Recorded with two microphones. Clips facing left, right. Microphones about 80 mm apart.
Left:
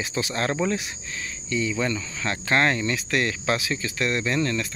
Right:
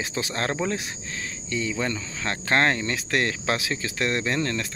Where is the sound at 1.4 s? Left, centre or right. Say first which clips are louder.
Left 2 dB; right.